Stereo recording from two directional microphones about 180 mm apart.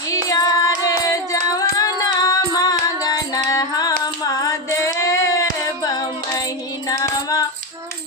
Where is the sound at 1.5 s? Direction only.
20° left (ahead or behind).